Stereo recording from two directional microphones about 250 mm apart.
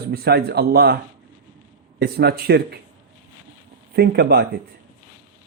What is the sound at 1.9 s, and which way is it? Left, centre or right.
Speech, right.